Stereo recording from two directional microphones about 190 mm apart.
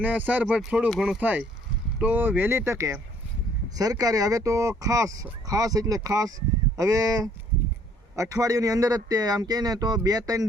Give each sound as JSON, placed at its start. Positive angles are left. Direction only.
{"t": 0.0, "sound": "a man's voice", "side_deg": -10}